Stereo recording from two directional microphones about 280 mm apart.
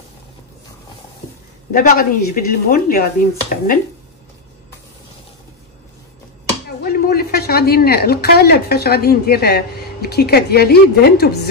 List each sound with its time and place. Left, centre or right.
1.7 s a woman's voice: left
6.8 s a woman's voice: left